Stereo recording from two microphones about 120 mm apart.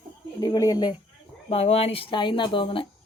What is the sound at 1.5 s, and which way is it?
Speech, 60° left (ahead or behind).